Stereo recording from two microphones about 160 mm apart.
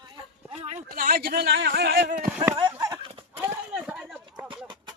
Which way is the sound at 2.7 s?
15° right (ahead or behind).